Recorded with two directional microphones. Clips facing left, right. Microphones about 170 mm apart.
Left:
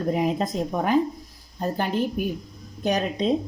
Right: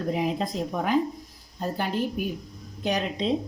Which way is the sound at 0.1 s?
45° left (ahead or behind).